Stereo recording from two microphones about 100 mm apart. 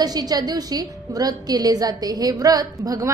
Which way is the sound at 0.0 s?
40° right (ahead or behind).